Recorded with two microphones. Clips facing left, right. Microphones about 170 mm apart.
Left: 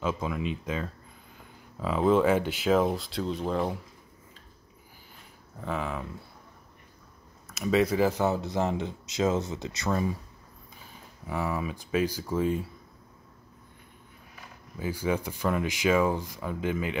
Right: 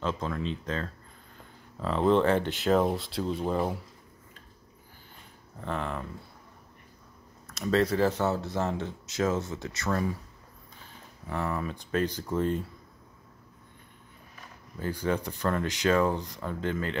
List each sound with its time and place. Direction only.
0.0 s speech: 10° left (ahead or behind)
5.6 s speech: 5° left (ahead or behind)
7.4 s speech: 5° left (ahead or behind)
11.2 s speech: 10° left (ahead or behind)
14.8 s speech: 5° left (ahead or behind)